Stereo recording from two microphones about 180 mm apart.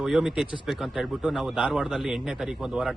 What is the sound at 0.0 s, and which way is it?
Speech, 5° right (ahead or behind).